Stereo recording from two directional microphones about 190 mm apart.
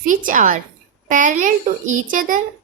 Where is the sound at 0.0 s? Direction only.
45° right (ahead or behind).